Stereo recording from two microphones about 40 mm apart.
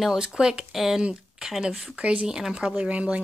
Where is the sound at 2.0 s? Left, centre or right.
Right.